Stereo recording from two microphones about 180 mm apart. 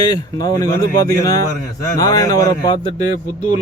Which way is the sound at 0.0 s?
20° left (ahead or behind).